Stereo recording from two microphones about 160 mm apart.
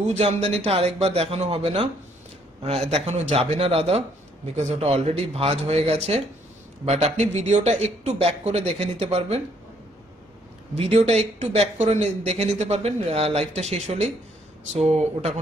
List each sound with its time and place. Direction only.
0.1 s speech: 40° right (ahead or behind)
2.9 s speech: 40° right (ahead or behind)
10.8 s speech: 40° right (ahead or behind)